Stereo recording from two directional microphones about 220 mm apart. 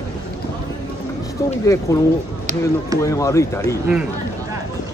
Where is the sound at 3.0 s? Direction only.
15° left (ahead or behind).